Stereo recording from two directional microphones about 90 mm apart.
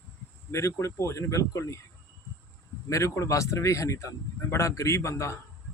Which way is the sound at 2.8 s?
35° left (ahead or behind).